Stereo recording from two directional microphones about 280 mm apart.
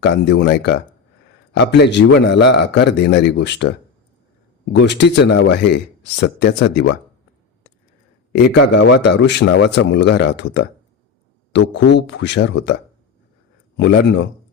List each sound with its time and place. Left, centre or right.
0.0 s speech: left
4.8 s speech: left
8.3 s speech: left
11.9 s speech: left
13.7 s speech: left